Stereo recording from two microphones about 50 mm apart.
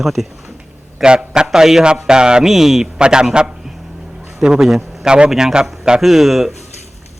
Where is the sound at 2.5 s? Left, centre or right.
Centre.